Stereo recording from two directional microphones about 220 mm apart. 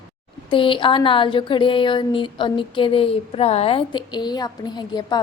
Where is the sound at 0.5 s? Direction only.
25° left (ahead or behind).